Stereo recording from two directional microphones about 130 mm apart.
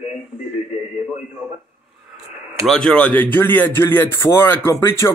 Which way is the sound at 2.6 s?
5° left (ahead or behind).